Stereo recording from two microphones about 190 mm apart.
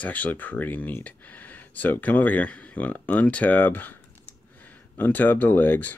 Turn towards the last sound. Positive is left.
turn(degrees=10)  # may be behind; listen again after turning